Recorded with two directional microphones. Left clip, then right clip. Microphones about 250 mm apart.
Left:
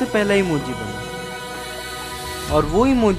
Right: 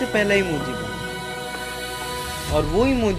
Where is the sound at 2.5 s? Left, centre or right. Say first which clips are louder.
Left 3 dB; centre.